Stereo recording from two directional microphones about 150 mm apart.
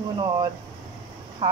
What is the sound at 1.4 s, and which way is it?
Speech, 25° right (ahead or behind).